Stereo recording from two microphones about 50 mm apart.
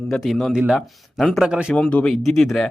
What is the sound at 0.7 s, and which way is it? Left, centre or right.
Speech, centre.